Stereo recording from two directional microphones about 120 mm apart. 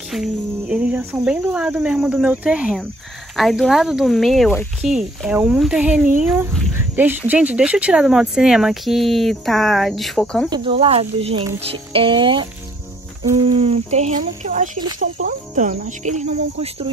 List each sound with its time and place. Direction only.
0.1 s speech: 10° right (ahead or behind)
10.5 s speech: 50° right (ahead or behind); by 14.7 s 90° right
15.0 s cricket: 90° right; by 16.9 s 60° right (ahead or behind)